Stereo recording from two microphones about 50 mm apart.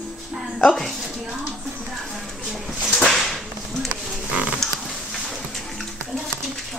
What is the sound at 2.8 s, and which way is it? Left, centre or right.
Whip, centre.